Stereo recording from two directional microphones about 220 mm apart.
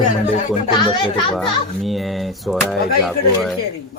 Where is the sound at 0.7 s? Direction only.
20° left (ahead or behind).